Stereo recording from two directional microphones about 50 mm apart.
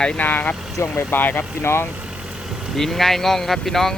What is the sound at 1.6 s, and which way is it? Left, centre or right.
Speech, left.